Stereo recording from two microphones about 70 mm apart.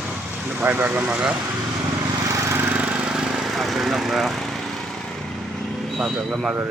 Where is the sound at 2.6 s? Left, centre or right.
Centre.